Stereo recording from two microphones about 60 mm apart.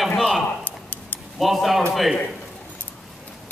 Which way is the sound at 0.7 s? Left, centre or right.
Left.